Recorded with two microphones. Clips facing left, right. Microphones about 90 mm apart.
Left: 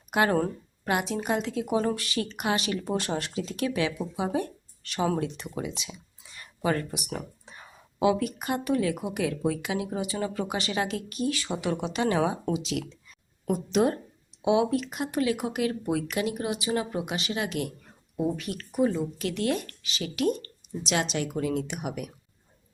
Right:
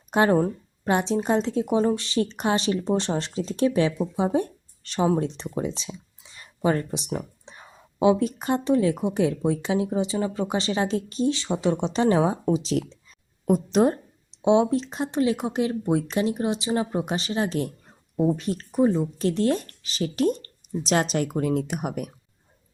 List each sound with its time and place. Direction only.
0.1 s a woman's voice: 30° right (ahead or behind)